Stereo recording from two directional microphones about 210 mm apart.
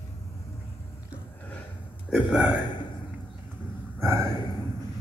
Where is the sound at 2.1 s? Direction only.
5° right (ahead or behind).